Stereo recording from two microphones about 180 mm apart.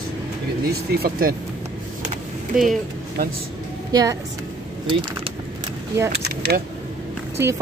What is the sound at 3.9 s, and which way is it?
Speech, 20° right (ahead or behind).